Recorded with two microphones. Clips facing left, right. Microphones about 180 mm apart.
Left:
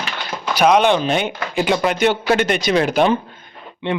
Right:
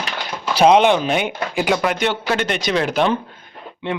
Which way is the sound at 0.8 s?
10° right (ahead or behind).